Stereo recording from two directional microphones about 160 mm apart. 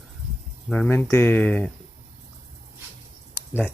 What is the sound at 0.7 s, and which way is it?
Speech, 10° left (ahead or behind).